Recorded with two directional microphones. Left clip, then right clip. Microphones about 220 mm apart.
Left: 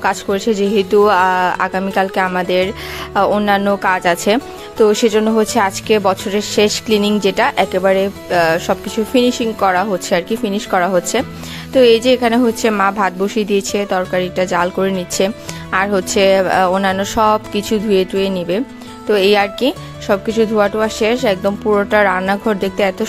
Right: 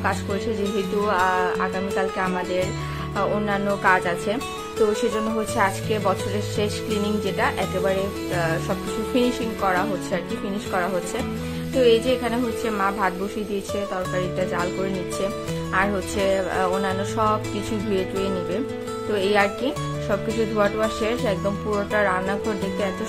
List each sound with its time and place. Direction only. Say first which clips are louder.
0.0 s speech: left 9 dB; 45° left (ahead or behind)